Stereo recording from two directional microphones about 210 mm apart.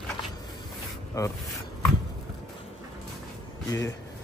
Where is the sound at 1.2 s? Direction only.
15° left (ahead or behind).